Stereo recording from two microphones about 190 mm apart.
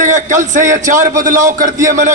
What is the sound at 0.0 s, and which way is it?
Speech, 40° right (ahead or behind).